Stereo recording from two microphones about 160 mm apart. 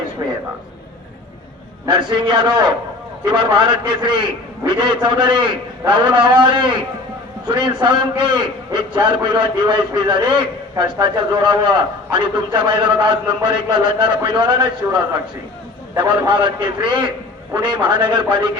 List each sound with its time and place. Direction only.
1.9 s a man's voice: 30° right (ahead or behind)
16.2 s a man's voice: 30° right (ahead or behind)